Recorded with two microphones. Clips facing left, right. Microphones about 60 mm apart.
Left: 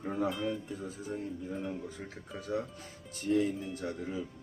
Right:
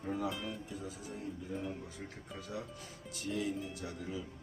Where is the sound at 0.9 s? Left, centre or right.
Left.